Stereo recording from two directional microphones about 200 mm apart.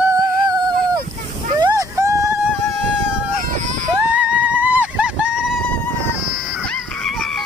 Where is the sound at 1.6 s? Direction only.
15° right (ahead or behind).